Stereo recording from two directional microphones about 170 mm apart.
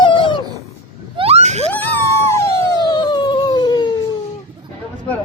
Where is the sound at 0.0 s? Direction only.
30° left (ahead or behind).